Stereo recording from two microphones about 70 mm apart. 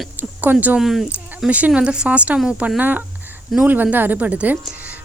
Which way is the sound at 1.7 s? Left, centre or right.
Centre.